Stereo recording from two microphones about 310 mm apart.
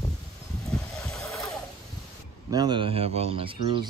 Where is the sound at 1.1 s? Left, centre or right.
Centre.